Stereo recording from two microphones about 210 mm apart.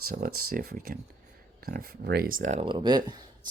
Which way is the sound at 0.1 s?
45° right (ahead or behind).